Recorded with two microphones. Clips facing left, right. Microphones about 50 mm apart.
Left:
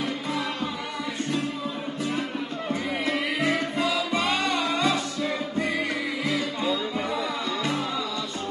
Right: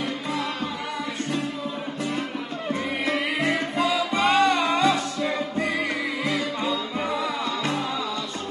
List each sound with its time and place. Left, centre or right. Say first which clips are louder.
2.7 s music: right 2 dB; right
3.5 s music: right 2 dB; centre
4.1 s music: right 5 dB; centre
4.6 s music: right 3 dB; centre